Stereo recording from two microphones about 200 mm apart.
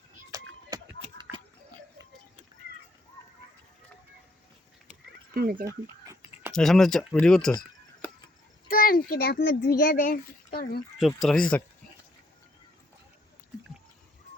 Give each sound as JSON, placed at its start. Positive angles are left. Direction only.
{"t": 0.3, "sound": "a sound", "side_deg": -15}
{"t": 4.9, "sound": "frog", "side_deg": -45}
{"t": 5.6, "sound": "a sound", "side_deg": -15}
{"t": 6.5, "sound": "speech", "side_deg": 0}
{"t": 8.6, "sound": "a child's voice", "side_deg": 45}
{"t": 11.0, "sound": "speech", "side_deg": 0}